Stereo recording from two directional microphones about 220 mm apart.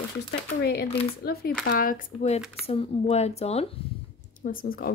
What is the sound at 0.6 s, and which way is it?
Speech, 45° left (ahead or behind).